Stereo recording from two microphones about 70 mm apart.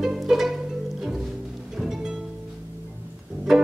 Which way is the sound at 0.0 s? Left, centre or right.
Centre.